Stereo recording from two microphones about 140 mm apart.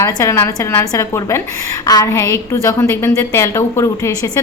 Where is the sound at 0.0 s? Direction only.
20° left (ahead or behind).